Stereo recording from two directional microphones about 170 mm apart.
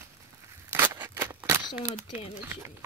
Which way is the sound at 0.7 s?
15° right (ahead or behind).